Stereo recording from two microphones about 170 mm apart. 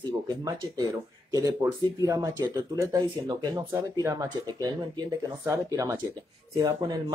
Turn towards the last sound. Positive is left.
turn(degrees=-25)  # may be behind; listen again after turning